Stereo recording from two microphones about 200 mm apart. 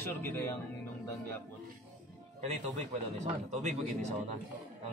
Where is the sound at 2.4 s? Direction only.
35° right (ahead or behind).